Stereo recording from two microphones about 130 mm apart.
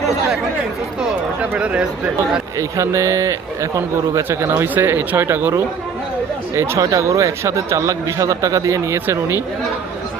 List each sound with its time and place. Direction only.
1.4 s speech: 10° right (ahead or behind)
2.6 s speech: 25° right (ahead or behind)